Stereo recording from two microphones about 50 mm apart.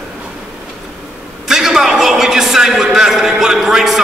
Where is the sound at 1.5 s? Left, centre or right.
Centre.